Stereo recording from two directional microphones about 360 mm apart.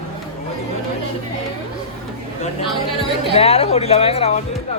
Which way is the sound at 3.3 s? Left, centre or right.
Centre.